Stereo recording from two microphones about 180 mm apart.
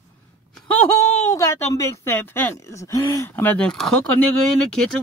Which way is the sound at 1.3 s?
15° left (ahead or behind).